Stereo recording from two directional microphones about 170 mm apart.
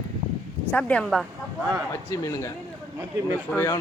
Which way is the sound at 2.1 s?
20° left (ahead or behind).